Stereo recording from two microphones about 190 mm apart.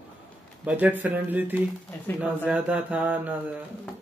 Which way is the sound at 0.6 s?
5° right (ahead or behind).